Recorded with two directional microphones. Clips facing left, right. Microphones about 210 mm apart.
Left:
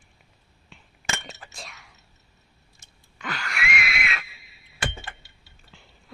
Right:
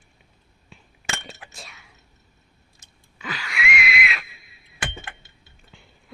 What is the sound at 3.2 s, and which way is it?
Wheeze, centre (ahead or behind).